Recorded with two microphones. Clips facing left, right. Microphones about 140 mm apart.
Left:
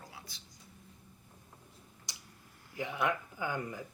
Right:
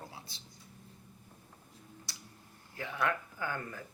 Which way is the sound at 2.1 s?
15° left (ahead or behind).